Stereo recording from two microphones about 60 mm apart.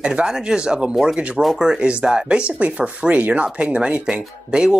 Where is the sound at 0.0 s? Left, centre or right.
Centre.